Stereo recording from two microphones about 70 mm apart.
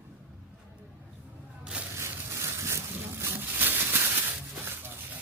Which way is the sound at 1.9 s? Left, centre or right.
Right.